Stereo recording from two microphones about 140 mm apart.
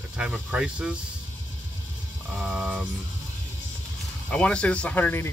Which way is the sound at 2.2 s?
Centre (ahead or behind).